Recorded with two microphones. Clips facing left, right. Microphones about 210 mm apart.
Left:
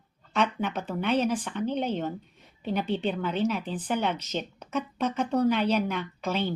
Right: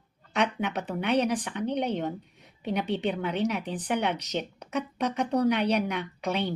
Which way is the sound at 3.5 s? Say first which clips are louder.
Even; 65° right (ahead or behind).